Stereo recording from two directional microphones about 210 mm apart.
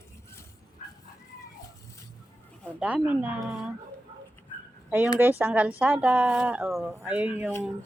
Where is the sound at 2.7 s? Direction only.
5° right (ahead or behind).